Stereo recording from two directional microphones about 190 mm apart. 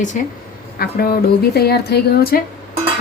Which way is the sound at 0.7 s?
50° left (ahead or behind).